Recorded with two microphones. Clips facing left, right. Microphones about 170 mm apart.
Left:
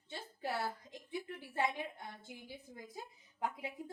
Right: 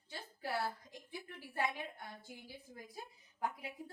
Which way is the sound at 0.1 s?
25° left (ahead or behind).